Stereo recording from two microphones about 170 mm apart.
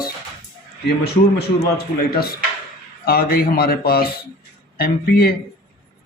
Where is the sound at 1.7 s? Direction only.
65° left (ahead or behind).